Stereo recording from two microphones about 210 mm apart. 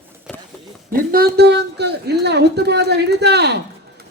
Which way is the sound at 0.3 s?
Centre (ahead or behind).